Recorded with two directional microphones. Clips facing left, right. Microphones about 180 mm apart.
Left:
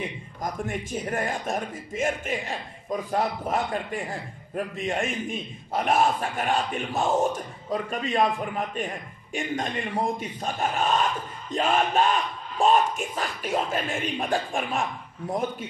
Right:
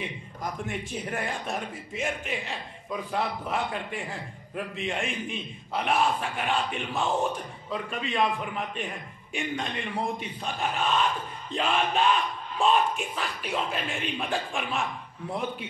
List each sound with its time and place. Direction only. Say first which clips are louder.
0.4 s a man's voice: left 3 dB; 45° left (ahead or behind)